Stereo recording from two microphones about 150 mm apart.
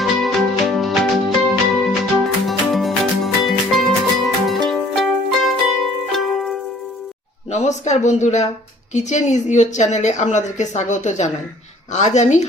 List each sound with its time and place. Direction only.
0.0 s music: centre (ahead or behind)
7.5 s a woman's voice: 50° left (ahead or behind)